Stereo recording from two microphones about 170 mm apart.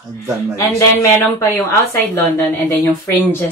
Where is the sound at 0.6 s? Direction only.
20° left (ahead or behind).